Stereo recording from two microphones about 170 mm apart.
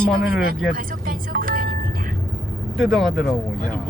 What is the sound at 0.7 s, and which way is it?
Music, 55° right (ahead or behind).